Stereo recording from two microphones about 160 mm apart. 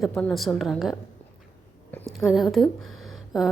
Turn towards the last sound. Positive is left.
turn(degrees=0)  # may be behind; listen again after turning